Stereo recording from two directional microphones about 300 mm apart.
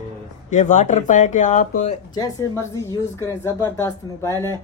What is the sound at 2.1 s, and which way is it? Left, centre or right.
Speech, centre.